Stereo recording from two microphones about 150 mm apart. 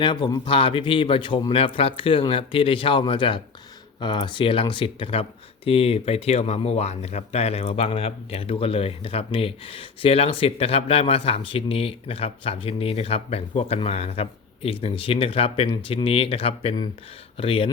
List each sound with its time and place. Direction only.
0.0 s speech: 35° left (ahead or behind)